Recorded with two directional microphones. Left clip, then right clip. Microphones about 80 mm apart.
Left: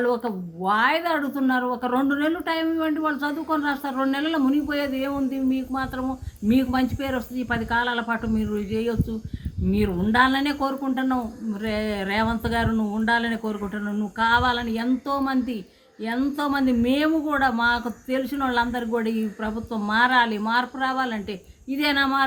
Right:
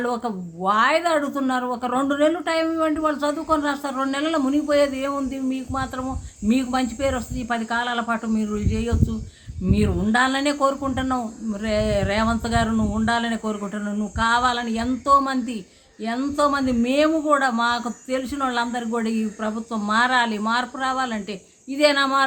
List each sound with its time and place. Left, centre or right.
0.0 s speech: right